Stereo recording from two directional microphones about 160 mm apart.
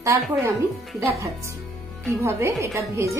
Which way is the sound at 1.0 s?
20° right (ahead or behind).